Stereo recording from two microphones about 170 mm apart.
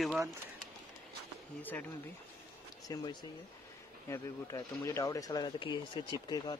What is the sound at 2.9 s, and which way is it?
Speech, 25° left (ahead or behind).